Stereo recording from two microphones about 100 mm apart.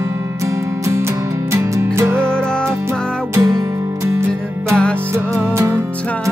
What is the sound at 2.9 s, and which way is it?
Music, 35° right (ahead or behind).